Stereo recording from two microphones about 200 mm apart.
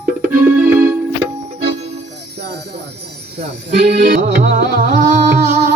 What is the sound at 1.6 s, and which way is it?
Music, 30° right (ahead or behind).